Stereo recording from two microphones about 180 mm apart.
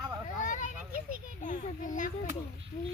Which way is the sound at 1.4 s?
45° left (ahead or behind).